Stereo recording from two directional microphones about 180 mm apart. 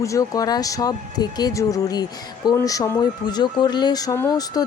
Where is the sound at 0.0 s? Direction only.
20° left (ahead or behind).